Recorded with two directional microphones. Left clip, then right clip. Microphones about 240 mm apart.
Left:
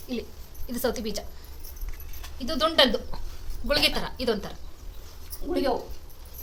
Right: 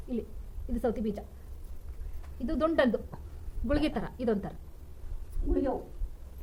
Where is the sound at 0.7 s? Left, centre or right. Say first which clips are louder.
Left 3 dB; right.